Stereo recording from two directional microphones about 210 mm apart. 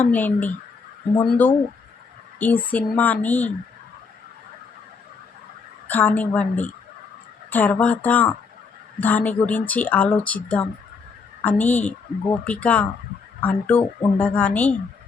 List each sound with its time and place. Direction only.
0.0 s speech: 10° left (ahead or behind)
2.4 s speech: 10° left (ahead or behind)
5.9 s speech: 10° left (ahead or behind)